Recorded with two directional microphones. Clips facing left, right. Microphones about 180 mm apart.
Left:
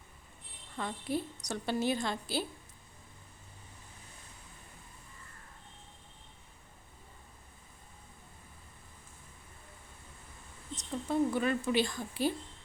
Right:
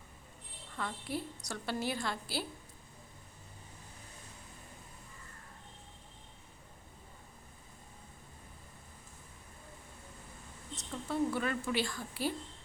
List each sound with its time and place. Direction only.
0.8 s a woman's voice: 20° left (ahead or behind)
10.8 s a woman's voice: 20° left (ahead or behind)